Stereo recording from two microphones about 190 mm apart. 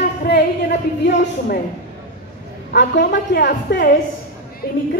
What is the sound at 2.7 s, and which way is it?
A woman's voice, 65° left (ahead or behind).